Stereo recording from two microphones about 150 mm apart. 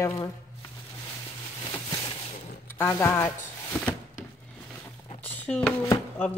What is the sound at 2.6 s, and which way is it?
Speech, 15° left (ahead or behind).